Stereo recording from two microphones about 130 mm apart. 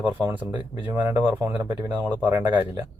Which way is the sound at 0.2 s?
15° right (ahead or behind).